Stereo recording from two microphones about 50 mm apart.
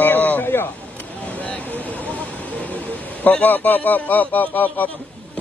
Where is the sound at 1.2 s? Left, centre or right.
Left.